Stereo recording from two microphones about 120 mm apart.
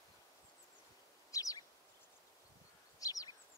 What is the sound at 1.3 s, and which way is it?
Chirp, 30° left (ahead or behind).